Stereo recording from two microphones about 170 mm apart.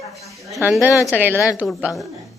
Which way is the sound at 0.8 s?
20° left (ahead or behind).